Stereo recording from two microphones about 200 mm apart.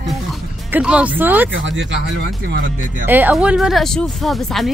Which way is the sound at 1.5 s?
65° right (ahead or behind).